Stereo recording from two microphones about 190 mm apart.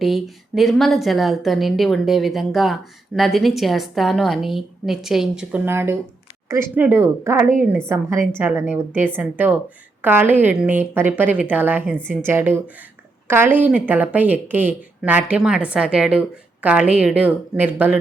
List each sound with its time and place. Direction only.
0.0 s a woman's voice: centre (ahead or behind)